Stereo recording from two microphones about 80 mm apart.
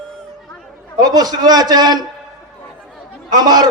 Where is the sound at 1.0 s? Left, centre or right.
Right.